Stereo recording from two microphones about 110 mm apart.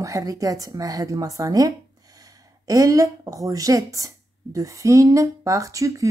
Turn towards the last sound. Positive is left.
turn(degrees=-30)  # may be behind; listen again after turning